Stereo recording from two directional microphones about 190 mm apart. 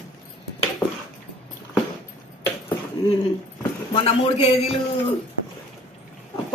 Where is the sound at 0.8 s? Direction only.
10° left (ahead or behind).